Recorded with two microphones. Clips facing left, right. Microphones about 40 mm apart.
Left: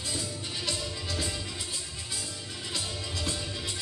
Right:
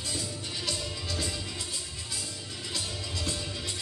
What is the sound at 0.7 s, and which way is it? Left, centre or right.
Music, centre.